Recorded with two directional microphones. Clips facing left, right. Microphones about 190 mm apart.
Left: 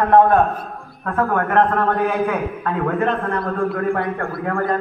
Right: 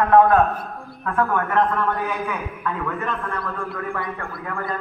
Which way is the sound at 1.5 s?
60° left (ahead or behind).